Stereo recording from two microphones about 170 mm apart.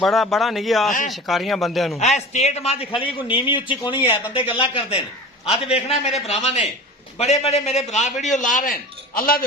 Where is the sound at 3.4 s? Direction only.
30° left (ahead or behind).